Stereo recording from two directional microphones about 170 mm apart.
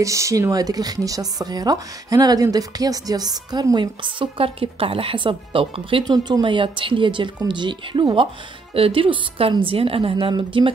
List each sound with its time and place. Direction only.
0.0 s a woman's voice: 20° right (ahead or behind)